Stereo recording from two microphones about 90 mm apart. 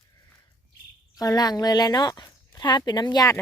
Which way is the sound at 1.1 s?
45° left (ahead or behind).